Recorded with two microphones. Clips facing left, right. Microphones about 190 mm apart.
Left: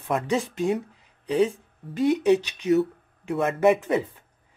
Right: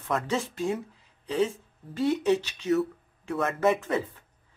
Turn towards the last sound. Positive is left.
turn(degrees=15)  # may be behind; listen again after turning